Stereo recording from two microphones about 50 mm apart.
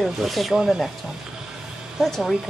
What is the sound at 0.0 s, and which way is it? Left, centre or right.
Speech, centre.